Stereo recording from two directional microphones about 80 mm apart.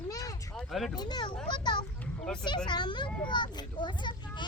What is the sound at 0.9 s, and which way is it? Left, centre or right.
A child's voice, left.